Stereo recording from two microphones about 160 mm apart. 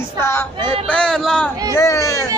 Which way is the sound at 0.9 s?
5° left (ahead or behind).